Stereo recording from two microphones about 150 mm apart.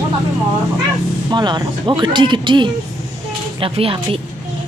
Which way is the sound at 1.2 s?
30° right (ahead or behind).